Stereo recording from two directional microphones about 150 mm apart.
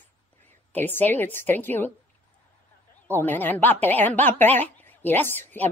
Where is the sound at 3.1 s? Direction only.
10° left (ahead or behind).